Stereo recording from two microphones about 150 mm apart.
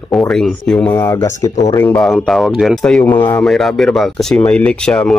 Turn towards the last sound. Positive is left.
turn(degrees=5)  # may be behind; listen again after turning